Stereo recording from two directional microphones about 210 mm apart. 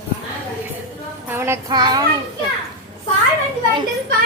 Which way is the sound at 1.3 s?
10° right (ahead or behind).